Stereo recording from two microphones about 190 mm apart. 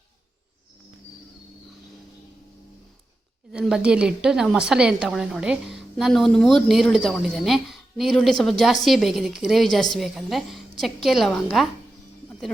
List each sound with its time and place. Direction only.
3.5 s a woman's voice: 5° right (ahead or behind)